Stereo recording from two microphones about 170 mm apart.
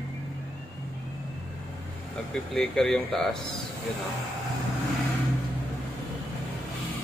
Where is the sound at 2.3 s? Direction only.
5° left (ahead or behind).